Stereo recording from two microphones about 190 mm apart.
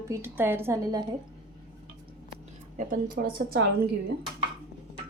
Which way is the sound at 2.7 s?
45° right (ahead or behind).